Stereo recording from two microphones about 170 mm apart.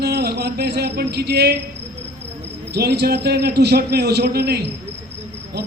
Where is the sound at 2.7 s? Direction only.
70° right (ahead or behind).